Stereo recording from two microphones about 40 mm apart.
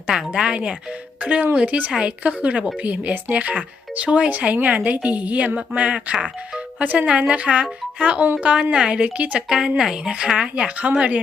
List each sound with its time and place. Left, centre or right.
0.3 s speech: right
1.2 s speech: right
4.3 s speech: right
6.7 s speech: right
9.5 s speech: centre; by 11.2 s right